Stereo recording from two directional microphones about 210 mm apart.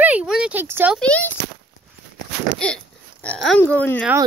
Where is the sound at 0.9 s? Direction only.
5° left (ahead or behind).